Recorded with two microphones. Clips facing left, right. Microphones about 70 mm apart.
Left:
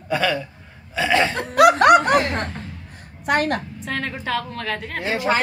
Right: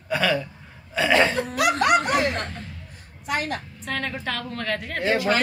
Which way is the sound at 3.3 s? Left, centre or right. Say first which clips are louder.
Left 7 dB; left.